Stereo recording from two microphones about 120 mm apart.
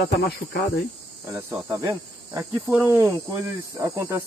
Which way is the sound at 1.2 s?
20° right (ahead or behind).